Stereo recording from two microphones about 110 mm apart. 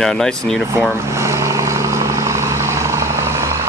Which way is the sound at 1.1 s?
25° right (ahead or behind).